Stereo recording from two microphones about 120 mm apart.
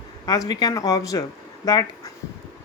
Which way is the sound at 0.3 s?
35° left (ahead or behind).